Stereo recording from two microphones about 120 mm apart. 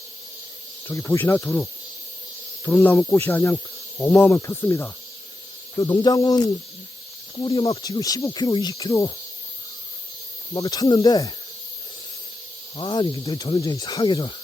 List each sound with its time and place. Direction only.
0.9 s insect: 20° left (ahead or behind)
2.6 s insect: 20° left (ahead or behind)
5.8 s speech: 35° left (ahead or behind)
7.4 s speech: 45° left (ahead or behind)
7.7 s speech: 30° left (ahead or behind)
10.5 s speech: 35° left (ahead or behind)
12.7 s speech: 40° left (ahead or behind)